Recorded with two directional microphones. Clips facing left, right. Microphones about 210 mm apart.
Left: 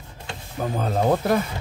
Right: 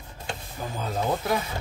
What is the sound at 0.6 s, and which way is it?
Speech, 60° left (ahead or behind).